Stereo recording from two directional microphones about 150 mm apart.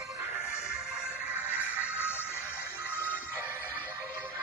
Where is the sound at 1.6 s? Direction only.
10° right (ahead or behind).